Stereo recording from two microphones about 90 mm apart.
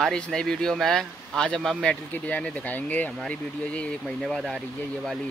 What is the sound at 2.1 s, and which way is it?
Speech, 15° left (ahead or behind).